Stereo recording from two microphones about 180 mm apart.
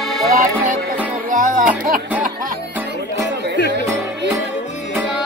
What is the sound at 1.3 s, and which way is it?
Music, 45° right (ahead or behind).